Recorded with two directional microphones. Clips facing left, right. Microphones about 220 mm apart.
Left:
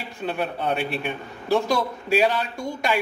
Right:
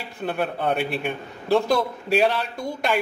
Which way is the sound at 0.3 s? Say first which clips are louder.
Right 2 dB; 55° right (ahead or behind).